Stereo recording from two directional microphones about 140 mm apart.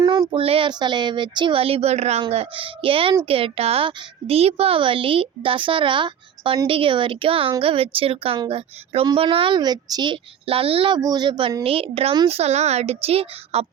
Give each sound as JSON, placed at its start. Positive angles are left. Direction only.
{"t": 0.0, "sound": "child singing", "side_deg": -25}
{"t": 0.3, "sound": "a woman's voice", "side_deg": -40}